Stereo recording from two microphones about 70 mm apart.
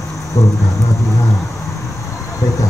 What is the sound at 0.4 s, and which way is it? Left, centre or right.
Music, left.